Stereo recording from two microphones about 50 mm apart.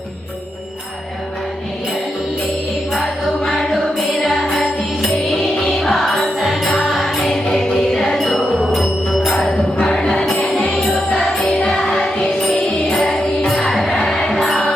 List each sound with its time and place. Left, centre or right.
3.4 s music: centre
3.7 s music: centre
9.8 s music: centre
10.1 s music: centre
10.3 s music: left
10.9 s music: centre
13.5 s music: centre